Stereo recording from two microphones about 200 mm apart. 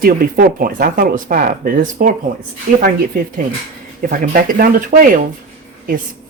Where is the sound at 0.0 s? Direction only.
45° right (ahead or behind).